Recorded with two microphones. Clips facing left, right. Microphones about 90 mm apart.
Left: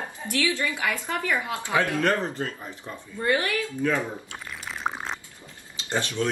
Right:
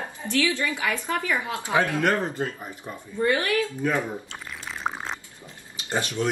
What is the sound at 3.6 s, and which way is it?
Speech, 20° right (ahead or behind).